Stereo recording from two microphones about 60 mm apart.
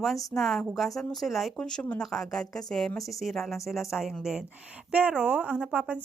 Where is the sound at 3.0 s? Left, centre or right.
Centre.